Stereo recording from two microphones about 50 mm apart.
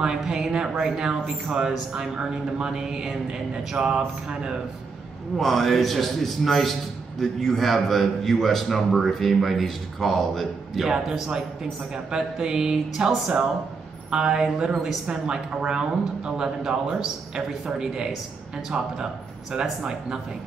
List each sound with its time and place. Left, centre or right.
0.2 s speech: centre
5.4 s a man's voice: centre
14.7 s a man's voice: centre
15.0 s speech: centre
19.6 s speech: centre